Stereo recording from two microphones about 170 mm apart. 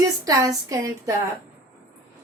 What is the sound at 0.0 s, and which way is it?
A woman's voice, 20° right (ahead or behind).